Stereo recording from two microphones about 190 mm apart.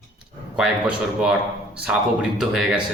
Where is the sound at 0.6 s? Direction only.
5° right (ahead or behind).